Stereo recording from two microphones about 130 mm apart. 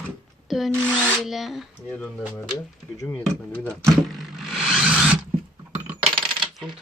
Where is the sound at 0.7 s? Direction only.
10° left (ahead or behind).